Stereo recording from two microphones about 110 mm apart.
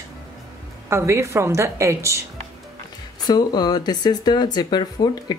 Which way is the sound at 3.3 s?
40° left (ahead or behind).